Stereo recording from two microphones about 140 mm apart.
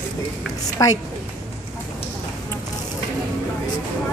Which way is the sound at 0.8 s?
25° left (ahead or behind).